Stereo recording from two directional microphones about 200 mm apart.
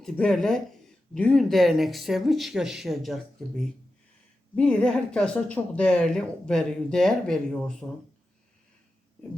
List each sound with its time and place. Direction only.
0.0 s a woman's voice: centre (ahead or behind)
4.5 s a woman's voice: 5° left (ahead or behind)